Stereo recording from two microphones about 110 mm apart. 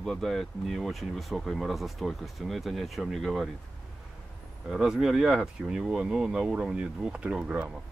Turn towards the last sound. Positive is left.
turn(degrees=-10)  # may be behind; listen again after turning